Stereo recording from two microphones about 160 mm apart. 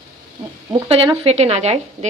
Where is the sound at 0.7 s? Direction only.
35° right (ahead or behind).